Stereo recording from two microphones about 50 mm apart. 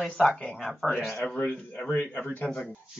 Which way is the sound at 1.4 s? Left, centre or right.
Left.